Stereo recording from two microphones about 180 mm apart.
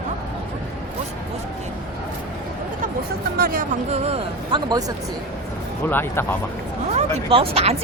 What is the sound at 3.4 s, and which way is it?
Speech, 55° right (ahead or behind).